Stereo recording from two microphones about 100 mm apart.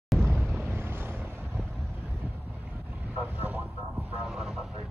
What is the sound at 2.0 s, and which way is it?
Boat, 15° right (ahead or behind).